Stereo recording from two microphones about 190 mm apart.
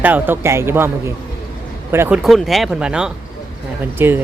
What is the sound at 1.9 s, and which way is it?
Speech, 15° right (ahead or behind).